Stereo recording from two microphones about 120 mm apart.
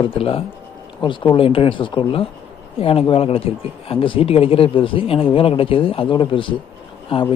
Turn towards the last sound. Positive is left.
turn(degrees=50)  # may be behind; listen again after turning